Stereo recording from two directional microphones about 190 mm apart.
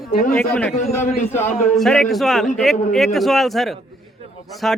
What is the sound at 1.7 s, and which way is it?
Speech, centre (ahead or behind).